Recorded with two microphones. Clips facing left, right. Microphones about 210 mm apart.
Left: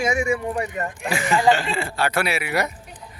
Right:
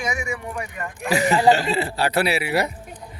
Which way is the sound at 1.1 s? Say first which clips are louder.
Right 2 dB; 40° right (ahead or behind).